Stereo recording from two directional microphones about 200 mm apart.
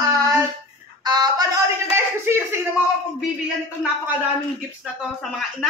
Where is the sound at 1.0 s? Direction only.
20° right (ahead or behind).